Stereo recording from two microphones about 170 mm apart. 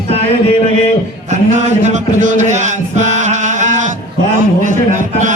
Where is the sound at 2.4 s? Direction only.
45° right (ahead or behind).